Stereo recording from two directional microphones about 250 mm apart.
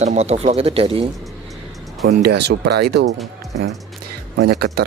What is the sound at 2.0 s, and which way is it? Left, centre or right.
Speech, right.